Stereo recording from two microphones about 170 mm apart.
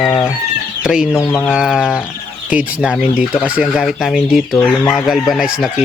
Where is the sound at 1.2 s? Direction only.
10° left (ahead or behind).